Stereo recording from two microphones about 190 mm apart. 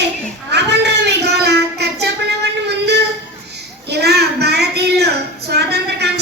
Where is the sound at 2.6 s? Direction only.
60° right (ahead or behind).